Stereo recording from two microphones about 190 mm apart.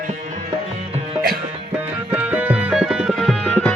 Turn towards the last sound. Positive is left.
turn(degrees=5)  # may be behind; listen again after turning